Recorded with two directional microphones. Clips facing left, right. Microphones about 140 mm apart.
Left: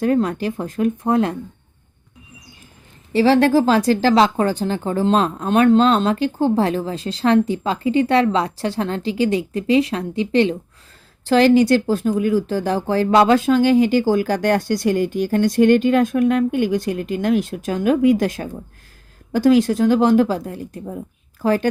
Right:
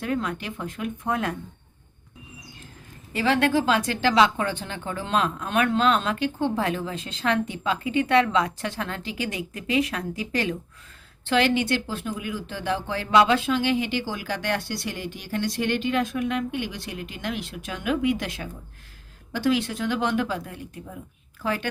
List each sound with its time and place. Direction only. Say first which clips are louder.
0.0 s speech: left 10 dB; 40° left (ahead or behind)
3.1 s speech: left 8 dB; 30° left (ahead or behind)
11.3 s speech: left 9 dB; 40° left (ahead or behind)